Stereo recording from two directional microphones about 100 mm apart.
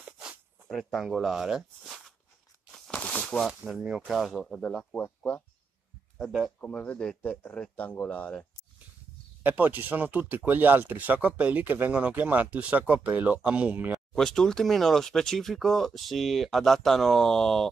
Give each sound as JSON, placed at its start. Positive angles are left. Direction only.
{"t": 0.2, "sound": "speech", "side_deg": 0}
{"t": 2.9, "sound": "a sound", "side_deg": 10}
{"t": 3.6, "sound": "speech", "side_deg": -5}
{"t": 6.1, "sound": "speech", "side_deg": 0}
{"t": 6.6, "sound": "speech", "side_deg": 10}
{"t": 9.4, "sound": "speech", "side_deg": -15}
{"t": 14.1, "sound": "speech", "side_deg": 5}